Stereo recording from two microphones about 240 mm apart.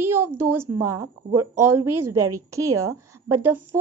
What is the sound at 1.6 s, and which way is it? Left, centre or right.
Speech, right.